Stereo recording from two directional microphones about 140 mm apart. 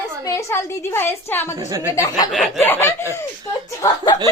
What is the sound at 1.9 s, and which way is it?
Speech, 25° left (ahead or behind).